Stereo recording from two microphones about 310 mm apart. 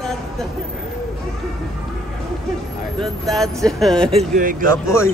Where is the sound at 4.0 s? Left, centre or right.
Centre.